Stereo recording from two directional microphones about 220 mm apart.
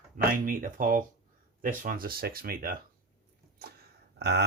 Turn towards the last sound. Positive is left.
turn(degrees=-50)  # may be behind; listen again after turning